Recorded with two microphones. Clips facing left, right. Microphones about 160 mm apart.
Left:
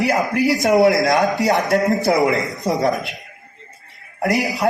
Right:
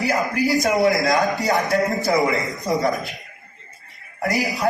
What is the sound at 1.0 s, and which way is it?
A man's voice, 20° left (ahead or behind).